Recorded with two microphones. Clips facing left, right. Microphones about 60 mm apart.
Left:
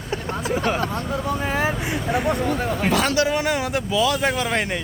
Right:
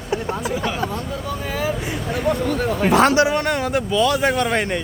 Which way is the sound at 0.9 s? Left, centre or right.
Left.